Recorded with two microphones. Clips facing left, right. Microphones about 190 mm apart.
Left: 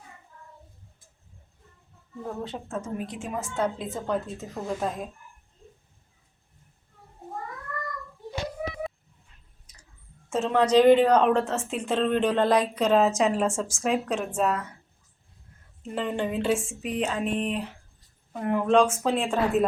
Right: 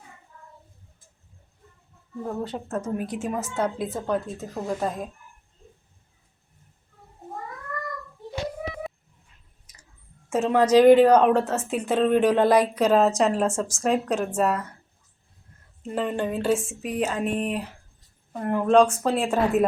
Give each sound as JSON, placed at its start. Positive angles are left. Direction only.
{"t": 2.2, "sound": "a woman's voice", "side_deg": -5}
{"t": 10.2, "sound": "a woman's voice", "side_deg": -5}
{"t": 15.8, "sound": "a woman's voice", "side_deg": 0}